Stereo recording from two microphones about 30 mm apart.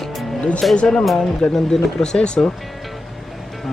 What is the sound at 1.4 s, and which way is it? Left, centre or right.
Speech, left.